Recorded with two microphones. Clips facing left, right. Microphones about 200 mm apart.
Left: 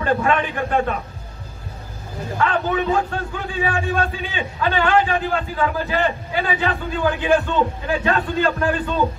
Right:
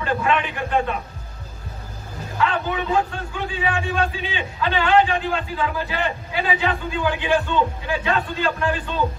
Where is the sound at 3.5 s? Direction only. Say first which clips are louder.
Left 2 dB; 45° left (ahead or behind).